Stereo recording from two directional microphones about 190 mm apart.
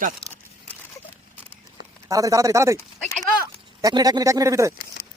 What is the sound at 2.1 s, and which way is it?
Speech, 15° right (ahead or behind).